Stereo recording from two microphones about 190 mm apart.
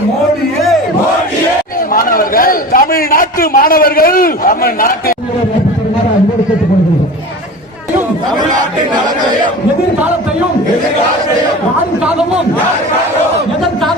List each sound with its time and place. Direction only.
1.9 s a man's voice: 50° left (ahead or behind)